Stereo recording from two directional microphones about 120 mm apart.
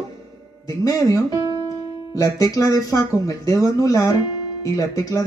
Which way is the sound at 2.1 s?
30° left (ahead or behind).